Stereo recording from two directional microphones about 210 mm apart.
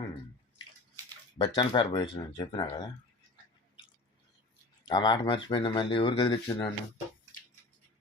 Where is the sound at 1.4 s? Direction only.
20° left (ahead or behind).